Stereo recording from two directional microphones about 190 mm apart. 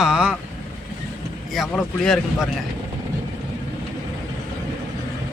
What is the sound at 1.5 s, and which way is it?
Speech, centre (ahead or behind).